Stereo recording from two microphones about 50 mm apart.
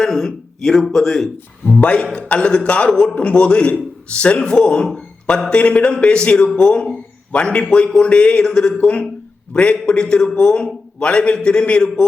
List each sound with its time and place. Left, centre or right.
0.0 s speech: centre
1.8 s speech: left